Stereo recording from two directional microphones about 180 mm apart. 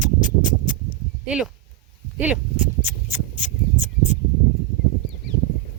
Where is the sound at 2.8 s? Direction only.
10° right (ahead or behind).